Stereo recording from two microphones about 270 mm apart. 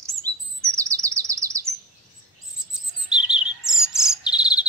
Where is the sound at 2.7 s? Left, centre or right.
Centre.